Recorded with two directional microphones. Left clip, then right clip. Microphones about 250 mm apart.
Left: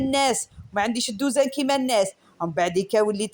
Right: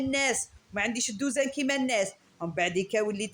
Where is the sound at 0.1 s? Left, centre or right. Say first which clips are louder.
Left 6 dB; left.